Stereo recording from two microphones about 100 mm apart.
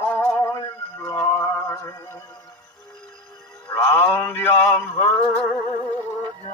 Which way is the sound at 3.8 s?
50° left (ahead or behind).